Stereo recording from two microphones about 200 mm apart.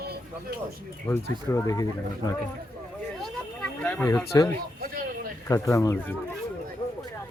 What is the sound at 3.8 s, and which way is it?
Speech, 10° left (ahead or behind).